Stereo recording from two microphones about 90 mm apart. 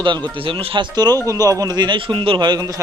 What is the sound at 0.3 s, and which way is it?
Speech, 85° right.